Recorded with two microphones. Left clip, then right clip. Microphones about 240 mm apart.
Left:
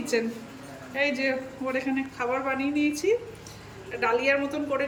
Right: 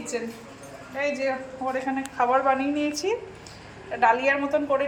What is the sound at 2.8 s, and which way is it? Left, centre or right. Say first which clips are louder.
Speech: left 1 dB; right.